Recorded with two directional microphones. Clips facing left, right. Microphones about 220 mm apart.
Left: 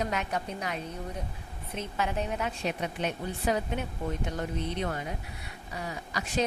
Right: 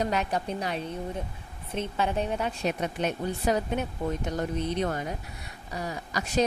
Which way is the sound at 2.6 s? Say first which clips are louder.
Right 4 dB; 45° right (ahead or behind).